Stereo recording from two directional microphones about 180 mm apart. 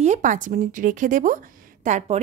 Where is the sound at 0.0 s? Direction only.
45° right (ahead or behind).